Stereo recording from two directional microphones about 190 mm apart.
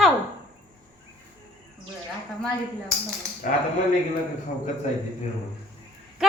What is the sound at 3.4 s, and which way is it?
Speech, 45° left (ahead or behind).